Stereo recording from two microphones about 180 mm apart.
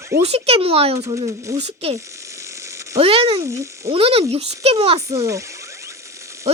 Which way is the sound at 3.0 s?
30° right (ahead or behind).